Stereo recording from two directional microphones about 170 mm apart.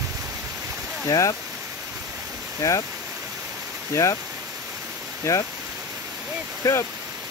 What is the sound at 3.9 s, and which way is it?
Speech, 15° left (ahead or behind).